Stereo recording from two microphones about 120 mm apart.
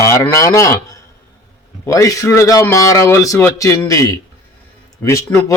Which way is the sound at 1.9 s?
25° left (ahead or behind).